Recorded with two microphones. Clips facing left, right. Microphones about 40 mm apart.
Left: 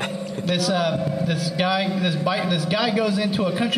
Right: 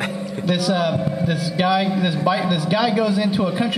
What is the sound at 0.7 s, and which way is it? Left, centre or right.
A man's voice, centre.